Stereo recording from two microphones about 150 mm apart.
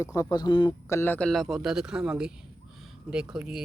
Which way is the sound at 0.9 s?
15° left (ahead or behind).